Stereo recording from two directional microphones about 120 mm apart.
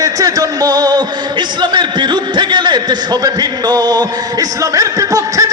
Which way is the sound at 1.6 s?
40° right (ahead or behind).